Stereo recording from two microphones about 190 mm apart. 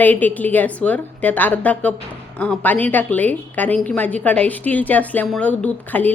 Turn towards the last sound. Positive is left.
turn(degrees=10)  # may be behind; listen again after turning